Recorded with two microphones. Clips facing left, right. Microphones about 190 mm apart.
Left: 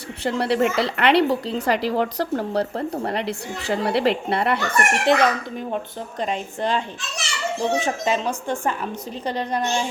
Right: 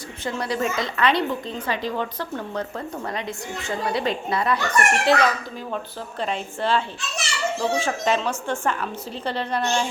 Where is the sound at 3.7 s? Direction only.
70° left (ahead or behind).